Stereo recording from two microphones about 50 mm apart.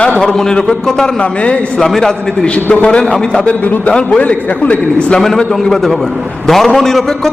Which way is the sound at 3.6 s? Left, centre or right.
Left.